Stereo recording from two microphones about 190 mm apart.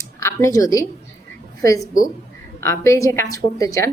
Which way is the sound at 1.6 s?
20° left (ahead or behind).